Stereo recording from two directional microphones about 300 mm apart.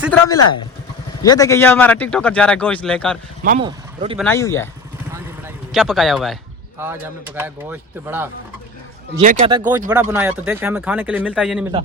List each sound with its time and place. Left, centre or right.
0.1 s speech: centre
3.6 s a man's voice: centre
4.2 s speech: centre
5.7 s speech: centre